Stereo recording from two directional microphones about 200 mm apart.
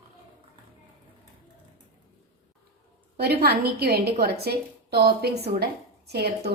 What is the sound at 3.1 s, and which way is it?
A woman's voice, 50° right (ahead or behind).